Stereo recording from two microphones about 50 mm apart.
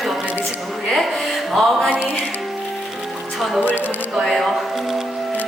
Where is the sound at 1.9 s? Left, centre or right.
Right.